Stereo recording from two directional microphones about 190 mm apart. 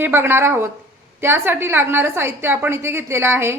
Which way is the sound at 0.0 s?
10° right (ahead or behind).